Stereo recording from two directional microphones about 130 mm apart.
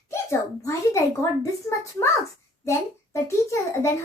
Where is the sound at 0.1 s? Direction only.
20° left (ahead or behind).